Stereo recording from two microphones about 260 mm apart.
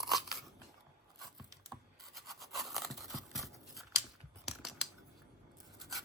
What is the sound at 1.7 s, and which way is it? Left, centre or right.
Scratch, centre.